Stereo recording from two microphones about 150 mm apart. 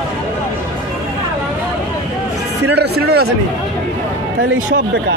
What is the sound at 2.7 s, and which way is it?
Speech, 90° right.